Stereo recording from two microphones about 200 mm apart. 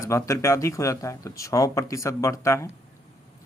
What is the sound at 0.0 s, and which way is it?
Speech, 15° left (ahead or behind).